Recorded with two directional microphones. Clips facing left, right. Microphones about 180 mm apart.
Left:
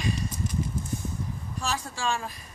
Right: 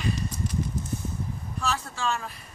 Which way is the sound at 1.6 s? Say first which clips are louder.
Right 1 dB; 10° left (ahead or behind).